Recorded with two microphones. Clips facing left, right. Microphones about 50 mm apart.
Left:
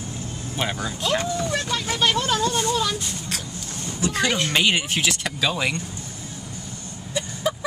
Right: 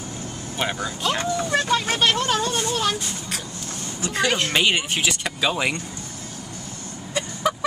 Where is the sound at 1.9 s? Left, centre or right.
Right.